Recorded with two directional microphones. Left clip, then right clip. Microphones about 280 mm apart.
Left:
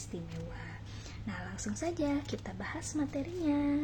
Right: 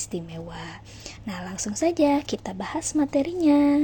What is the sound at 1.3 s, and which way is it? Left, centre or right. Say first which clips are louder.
A woman's voice: right 8 dB; right.